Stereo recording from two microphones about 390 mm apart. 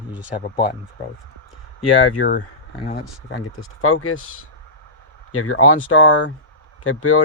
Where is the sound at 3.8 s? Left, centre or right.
Left.